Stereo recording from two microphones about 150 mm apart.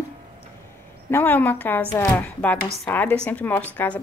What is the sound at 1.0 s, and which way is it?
A woman's voice, 15° left (ahead or behind).